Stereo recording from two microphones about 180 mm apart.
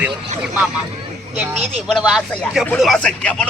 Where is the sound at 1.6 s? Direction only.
35° right (ahead or behind).